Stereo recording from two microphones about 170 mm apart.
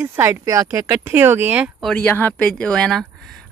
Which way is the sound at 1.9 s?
10° left (ahead or behind).